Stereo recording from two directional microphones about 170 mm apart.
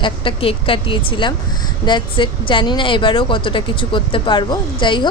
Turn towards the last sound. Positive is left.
turn(degrees=30)  # may be behind; listen again after turning